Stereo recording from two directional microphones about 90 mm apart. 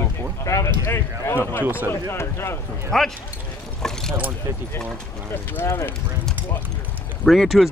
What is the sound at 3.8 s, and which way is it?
Vehicle, 5° left (ahead or behind).